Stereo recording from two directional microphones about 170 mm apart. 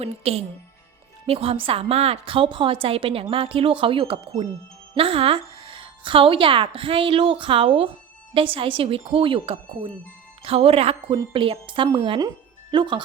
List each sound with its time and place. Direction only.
0.0 s a woman's voice: 35° right (ahead or behind)